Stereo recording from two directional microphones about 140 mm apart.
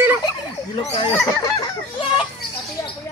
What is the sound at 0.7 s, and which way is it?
Speech, 40° left (ahead or behind).